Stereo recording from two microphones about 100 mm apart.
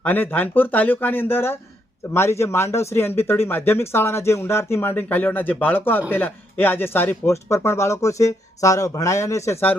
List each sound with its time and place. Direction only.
0.0 s speech: 20° left (ahead or behind)